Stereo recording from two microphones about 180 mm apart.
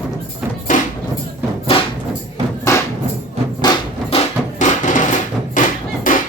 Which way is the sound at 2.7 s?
15° left (ahead or behind).